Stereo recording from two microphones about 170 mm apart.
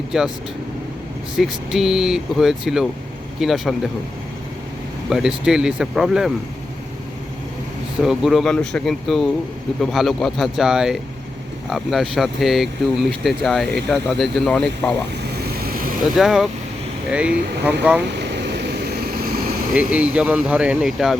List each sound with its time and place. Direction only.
0.1 s speech: 5° right (ahead or behind)
1.4 s speech: centre (ahead or behind)
5.0 s speech: 5° right (ahead or behind)
8.0 s speech: centre (ahead or behind)
15.4 s vehicle: 65° right (ahead or behind)
16.1 s speech: centre (ahead or behind)
18.1 s vehicle: 90° right; by 19.5 s 60° right (ahead or behind)
19.7 s speech: 5° right (ahead or behind)